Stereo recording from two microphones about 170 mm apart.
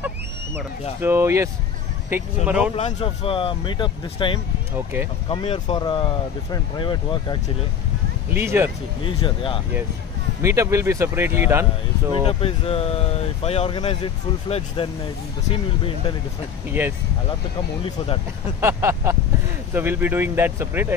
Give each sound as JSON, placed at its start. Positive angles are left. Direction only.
{"t": 1.0, "sound": "speech", "side_deg": -15}
{"t": 3.0, "sound": "speech", "side_deg": 30}
{"t": 8.3, "sound": "speech", "side_deg": -10}
{"t": 9.0, "sound": "speech", "side_deg": 30}
{"t": 10.4, "sound": "speech", "side_deg": -15}
{"t": 12.3, "sound": "speech", "side_deg": 35}
{"t": 17.8, "sound": "speech", "side_deg": 30}
{"t": 18.6, "sound": "speech", "side_deg": -15}